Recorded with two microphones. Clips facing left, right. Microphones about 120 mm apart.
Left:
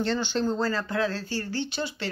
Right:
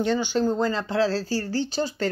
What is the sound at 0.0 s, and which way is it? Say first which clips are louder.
Speech: right 4 dB; 10° right (ahead or behind).